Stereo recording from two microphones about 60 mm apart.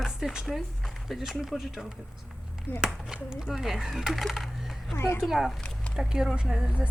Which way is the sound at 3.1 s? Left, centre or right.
Centre.